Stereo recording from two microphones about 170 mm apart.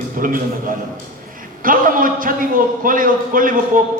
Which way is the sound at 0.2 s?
55° right (ahead or behind).